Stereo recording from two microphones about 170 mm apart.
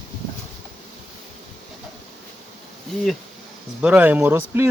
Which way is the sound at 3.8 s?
10° right (ahead or behind).